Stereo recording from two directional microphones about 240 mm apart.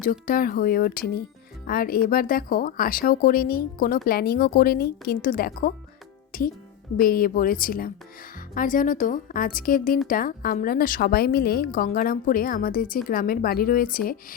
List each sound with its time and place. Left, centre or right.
0.0 s a woman's voice: left
6.3 s music: left
6.9 s a woman's voice: left